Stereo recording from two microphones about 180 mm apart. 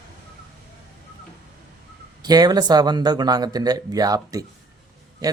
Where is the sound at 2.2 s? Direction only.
20° right (ahead or behind).